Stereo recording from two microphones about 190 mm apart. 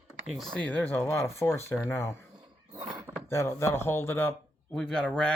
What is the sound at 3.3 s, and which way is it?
Speech, 15° left (ahead or behind).